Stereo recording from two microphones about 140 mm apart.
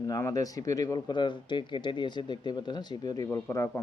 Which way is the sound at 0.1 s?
25° left (ahead or behind).